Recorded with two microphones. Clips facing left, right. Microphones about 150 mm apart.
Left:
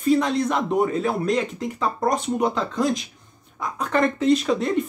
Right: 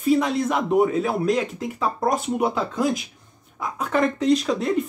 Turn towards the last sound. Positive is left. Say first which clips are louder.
# even
turn(degrees=0)  # may be behind; listen again after turning